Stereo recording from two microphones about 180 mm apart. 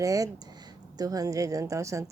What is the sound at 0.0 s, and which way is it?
Speech, 20° right (ahead or behind).